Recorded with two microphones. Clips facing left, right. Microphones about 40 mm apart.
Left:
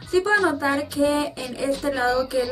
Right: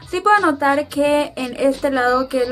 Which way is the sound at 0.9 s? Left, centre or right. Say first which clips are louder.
Right 5 dB; right.